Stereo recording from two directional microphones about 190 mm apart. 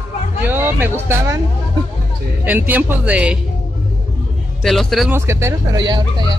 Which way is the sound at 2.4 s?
10° right (ahead or behind).